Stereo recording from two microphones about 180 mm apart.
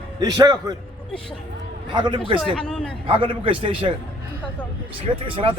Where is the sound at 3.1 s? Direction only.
30° right (ahead or behind).